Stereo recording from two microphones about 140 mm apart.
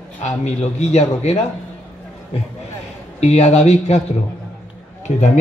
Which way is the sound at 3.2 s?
50° left (ahead or behind).